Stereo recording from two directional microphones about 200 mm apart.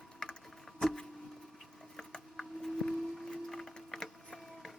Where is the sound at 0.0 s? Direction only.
5° left (ahead or behind).